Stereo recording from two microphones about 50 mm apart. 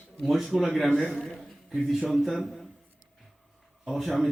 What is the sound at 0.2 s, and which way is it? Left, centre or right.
A man's voice, centre.